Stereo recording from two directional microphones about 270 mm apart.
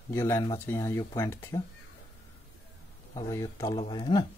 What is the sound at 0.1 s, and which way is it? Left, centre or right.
Speech, centre.